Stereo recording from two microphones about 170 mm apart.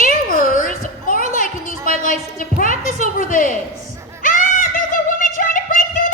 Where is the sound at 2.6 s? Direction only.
40° right (ahead or behind).